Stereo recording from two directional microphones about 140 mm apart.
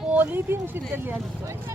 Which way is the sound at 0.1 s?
10° right (ahead or behind).